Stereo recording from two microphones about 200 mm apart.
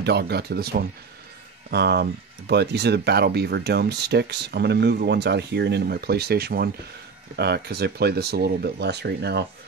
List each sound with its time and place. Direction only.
0.0 s speech: 55° right (ahead or behind)